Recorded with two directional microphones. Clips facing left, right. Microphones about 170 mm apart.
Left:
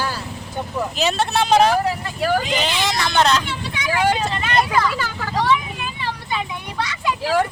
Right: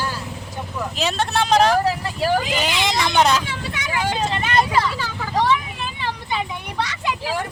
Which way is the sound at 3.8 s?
65° left (ahead or behind).